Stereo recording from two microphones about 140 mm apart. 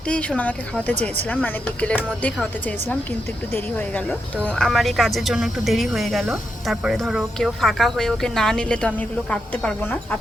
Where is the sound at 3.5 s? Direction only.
10° left (ahead or behind).